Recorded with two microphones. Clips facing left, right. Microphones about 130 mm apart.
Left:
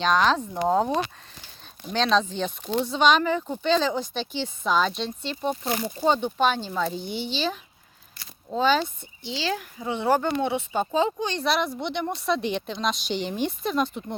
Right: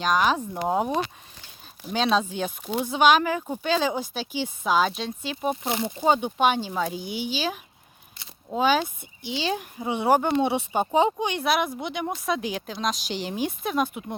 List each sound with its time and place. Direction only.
0.0 s speech: 10° right (ahead or behind)
5.6 s speech: 20° right (ahead or behind)